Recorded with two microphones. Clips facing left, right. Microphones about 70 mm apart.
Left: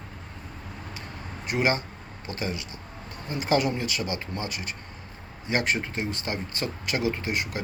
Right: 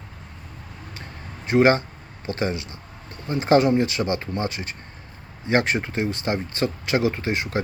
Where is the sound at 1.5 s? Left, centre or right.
Right.